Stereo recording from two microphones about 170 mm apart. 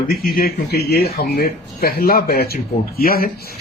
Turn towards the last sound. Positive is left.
turn(degrees=60)  # may be behind; listen again after turning